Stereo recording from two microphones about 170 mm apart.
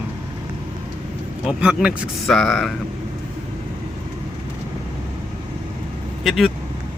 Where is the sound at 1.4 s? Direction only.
5° right (ahead or behind).